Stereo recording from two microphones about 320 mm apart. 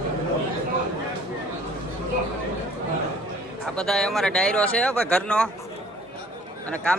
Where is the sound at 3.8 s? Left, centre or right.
Centre.